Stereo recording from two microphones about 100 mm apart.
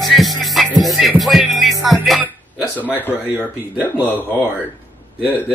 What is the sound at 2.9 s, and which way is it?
Speech, 20° left (ahead or behind).